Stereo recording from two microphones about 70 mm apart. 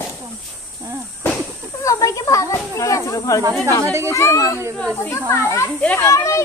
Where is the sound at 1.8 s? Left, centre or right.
Left.